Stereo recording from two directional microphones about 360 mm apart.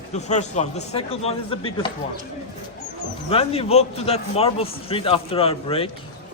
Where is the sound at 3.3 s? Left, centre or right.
Centre.